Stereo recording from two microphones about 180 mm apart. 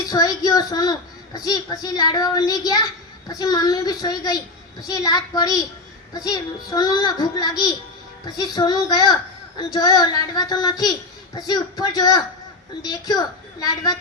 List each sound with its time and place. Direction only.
0.0 s a child's voice: 20° left (ahead or behind)